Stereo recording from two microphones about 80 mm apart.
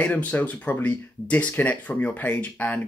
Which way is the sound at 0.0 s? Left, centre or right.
Centre.